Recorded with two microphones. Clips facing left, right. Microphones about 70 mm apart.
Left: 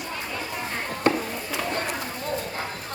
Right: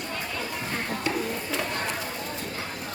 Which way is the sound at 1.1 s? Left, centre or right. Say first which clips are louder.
Left 7 dB; left.